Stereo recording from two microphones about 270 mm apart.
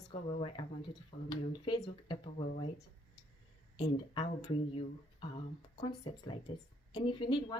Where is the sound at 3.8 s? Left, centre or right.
Centre.